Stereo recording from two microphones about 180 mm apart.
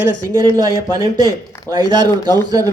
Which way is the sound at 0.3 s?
20° right (ahead or behind).